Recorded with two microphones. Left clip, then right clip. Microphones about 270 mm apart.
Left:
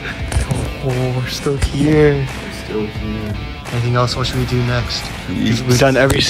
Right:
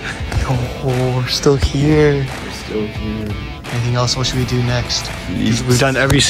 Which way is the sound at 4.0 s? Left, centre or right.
Centre.